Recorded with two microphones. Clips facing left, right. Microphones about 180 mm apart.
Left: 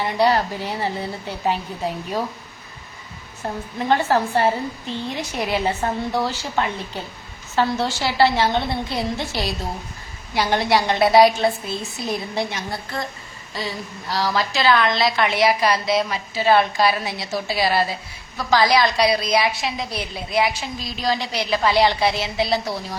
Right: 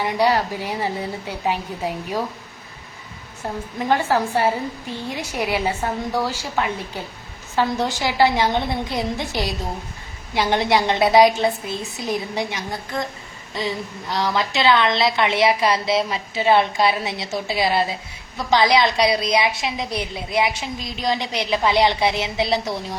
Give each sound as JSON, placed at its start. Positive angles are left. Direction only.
{"t": 0.0, "sound": "a woman's voice", "side_deg": -10}
{"t": 3.8, "sound": "a woman's voice", "side_deg": -10}